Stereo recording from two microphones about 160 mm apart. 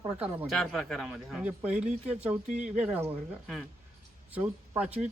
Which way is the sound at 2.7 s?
10° right (ahead or behind).